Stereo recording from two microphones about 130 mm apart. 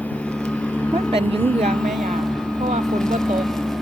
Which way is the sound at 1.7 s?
5° left (ahead or behind).